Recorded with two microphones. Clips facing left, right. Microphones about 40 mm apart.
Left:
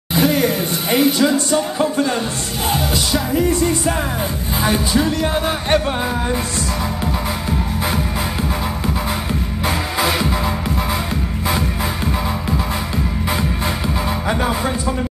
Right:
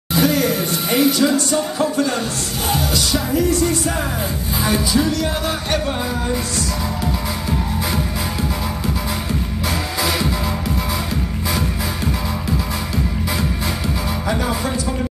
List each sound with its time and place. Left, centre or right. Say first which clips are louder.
0.1 s speech: left 1 dB; left
4.6 s music: left 1 dB; left
9.7 s music: left 3 dB; left
14.2 s music: left 1 dB; left